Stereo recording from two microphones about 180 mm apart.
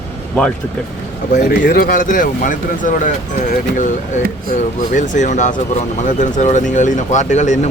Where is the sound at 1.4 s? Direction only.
50° left (ahead or behind).